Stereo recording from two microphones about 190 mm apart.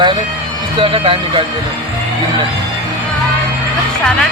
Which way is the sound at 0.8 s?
30° right (ahead or behind).